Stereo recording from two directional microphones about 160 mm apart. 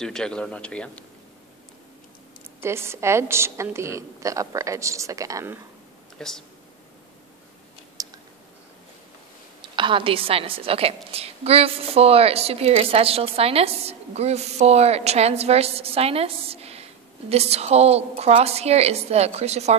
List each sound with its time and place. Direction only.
0.0 s a man's voice: 5° left (ahead or behind)
2.6 s a woman's voice: 15° right (ahead or behind)
6.1 s speech: 5° left (ahead or behind)
8.0 s a sound: 20° right (ahead or behind)
9.6 s a woman's voice: 30° right (ahead or behind)